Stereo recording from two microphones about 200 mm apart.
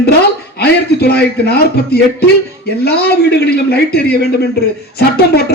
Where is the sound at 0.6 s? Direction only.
55° left (ahead or behind).